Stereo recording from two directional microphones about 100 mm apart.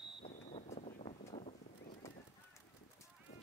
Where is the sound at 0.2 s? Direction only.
90° left.